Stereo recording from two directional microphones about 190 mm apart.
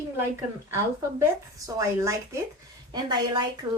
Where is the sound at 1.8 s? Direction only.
15° right (ahead or behind).